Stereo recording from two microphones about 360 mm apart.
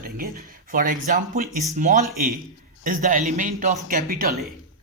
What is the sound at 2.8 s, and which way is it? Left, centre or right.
Speech, right.